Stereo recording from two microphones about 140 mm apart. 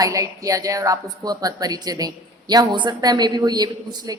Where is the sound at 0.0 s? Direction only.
25° right (ahead or behind).